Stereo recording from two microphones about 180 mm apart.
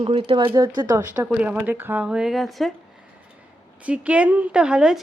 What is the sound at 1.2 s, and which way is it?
A woman's voice, 5° right (ahead or behind).